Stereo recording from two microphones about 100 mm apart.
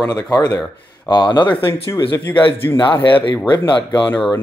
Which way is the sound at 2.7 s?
50° left (ahead or behind).